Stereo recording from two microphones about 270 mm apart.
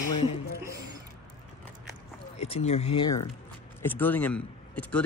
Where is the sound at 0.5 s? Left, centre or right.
Centre.